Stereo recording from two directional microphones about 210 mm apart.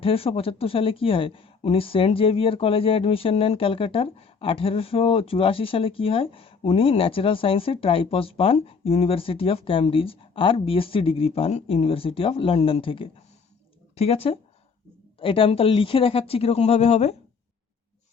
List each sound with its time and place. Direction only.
0.0 s speech: 25° left (ahead or behind)